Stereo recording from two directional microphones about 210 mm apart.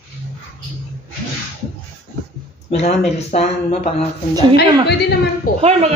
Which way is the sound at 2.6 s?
30° left (ahead or behind).